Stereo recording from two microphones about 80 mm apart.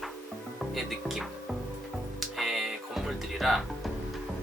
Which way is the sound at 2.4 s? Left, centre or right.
Centre.